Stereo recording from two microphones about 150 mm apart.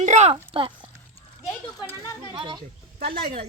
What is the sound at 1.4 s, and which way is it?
Speech, 20° left (ahead or behind).